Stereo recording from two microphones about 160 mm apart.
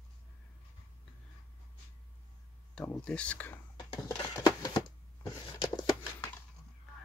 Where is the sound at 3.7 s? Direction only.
25° left (ahead or behind).